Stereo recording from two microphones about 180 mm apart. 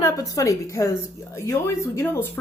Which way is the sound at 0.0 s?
20° left (ahead or behind).